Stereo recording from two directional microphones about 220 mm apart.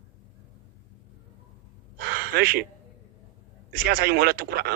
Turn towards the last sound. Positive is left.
turn(degrees=-45)  # may be behind; listen again after turning